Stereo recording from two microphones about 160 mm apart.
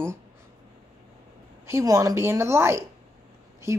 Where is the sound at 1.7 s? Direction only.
20° right (ahead or behind).